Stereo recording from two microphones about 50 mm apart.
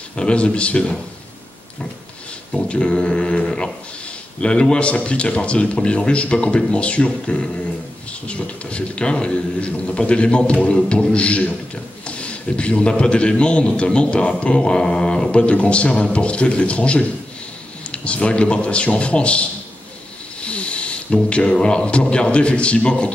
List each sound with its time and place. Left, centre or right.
0.1 s speech: left
2.5 s speech: left
20.4 s a sound: left
21.3 s speech: left